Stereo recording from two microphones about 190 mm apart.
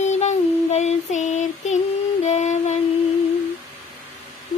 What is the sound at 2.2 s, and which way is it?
Music, 35° left (ahead or behind).